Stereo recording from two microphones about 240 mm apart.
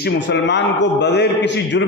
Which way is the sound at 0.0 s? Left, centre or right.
Left.